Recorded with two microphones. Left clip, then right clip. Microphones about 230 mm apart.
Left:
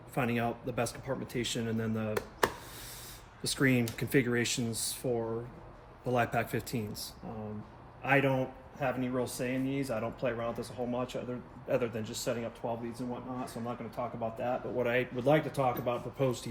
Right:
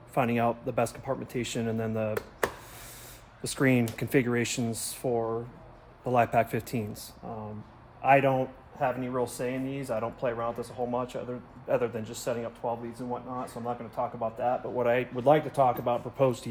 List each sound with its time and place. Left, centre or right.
0.1 s a man's voice: right
3.4 s a man's voice: right